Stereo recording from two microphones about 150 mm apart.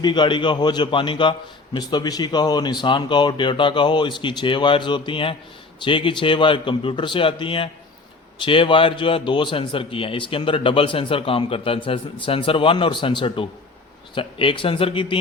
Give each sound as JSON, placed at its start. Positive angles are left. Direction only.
{"t": 0.0, "sound": "a man's voice", "side_deg": 30}